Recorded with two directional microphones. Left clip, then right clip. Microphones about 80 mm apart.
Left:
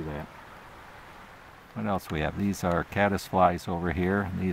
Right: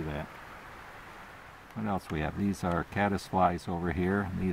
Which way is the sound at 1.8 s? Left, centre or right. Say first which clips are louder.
Left 4 dB; left.